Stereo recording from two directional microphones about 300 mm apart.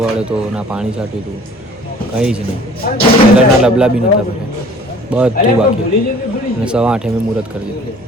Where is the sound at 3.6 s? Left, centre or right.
Centre.